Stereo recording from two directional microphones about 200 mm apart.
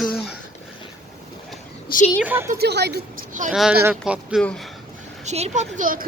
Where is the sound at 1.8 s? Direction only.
40° left (ahead or behind).